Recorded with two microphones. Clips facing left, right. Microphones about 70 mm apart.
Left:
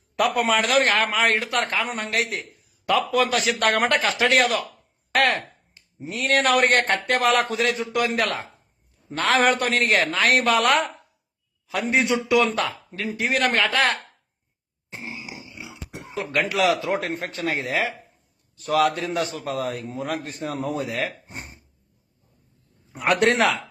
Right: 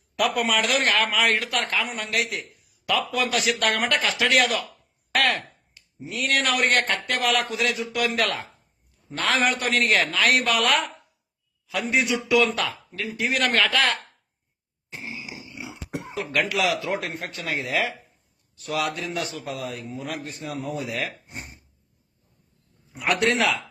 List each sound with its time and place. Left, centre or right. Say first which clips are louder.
0.2 s a man's voice: left 2 dB; left
5.1 s a sound: left 2 dB; left
6.1 s a man's voice: left 4 dB; left
14.8 s a sound: left 1 dB; left
16.3 s a man's voice: left 3 dB; left
22.9 s a man's voice: left 3 dB; left